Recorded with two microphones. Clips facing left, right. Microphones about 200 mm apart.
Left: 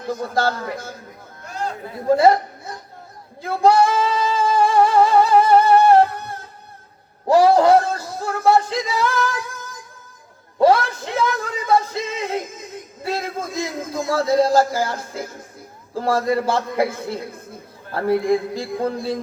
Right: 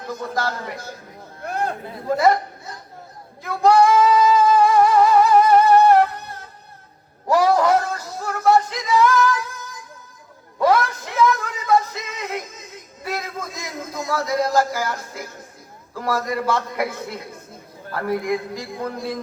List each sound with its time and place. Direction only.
0.1 s a man's voice: 30° left (ahead or behind)
1.5 s a sound: 60° right (ahead or behind)
2.0 s a man's voice: 30° left (ahead or behind)
3.4 s singing: 30° left (ahead or behind)
7.3 s speech: 30° left (ahead or behind)
10.6 s a sound: 30° left (ahead or behind)
13.0 s a man's voice: 30° left (ahead or behind)